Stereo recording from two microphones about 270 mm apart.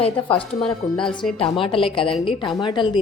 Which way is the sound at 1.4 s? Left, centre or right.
Centre.